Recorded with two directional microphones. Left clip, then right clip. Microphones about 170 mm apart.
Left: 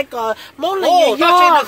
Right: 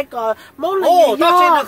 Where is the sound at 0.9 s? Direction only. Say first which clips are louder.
Even; 70° right (ahead or behind).